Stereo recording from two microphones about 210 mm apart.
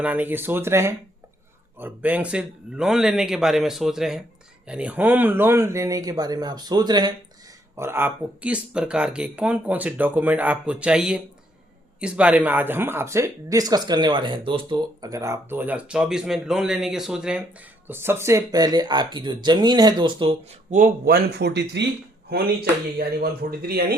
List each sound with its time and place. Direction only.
0.0 s a man's voice: 10° right (ahead or behind)
20.7 s speech: 40° right (ahead or behind)
23.0 s speech: 45° right (ahead or behind)